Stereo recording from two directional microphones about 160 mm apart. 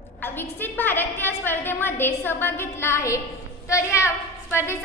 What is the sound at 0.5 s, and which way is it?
A woman's voice, 10° left (ahead or behind).